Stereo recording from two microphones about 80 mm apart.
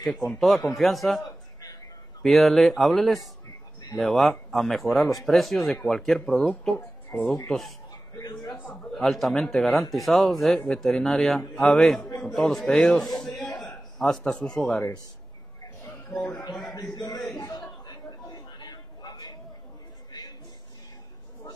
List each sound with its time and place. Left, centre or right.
0.0 s speech: centre
2.2 s speech: centre
8.2 s a man's voice: left
8.9 s a man's voice: centre
16.9 s a man's voice: left
17.4 s chatter: left
20.1 s a sound: left